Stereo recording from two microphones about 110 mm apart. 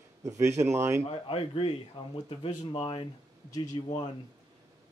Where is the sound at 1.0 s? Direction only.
55° left (ahead or behind); by 4.1 s 40° left (ahead or behind).